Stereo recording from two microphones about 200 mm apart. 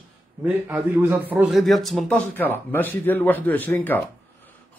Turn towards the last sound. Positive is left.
turn(degrees=10)  # may be behind; listen again after turning